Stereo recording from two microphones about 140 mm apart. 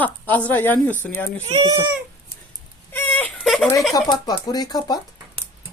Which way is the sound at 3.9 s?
30° left (ahead or behind).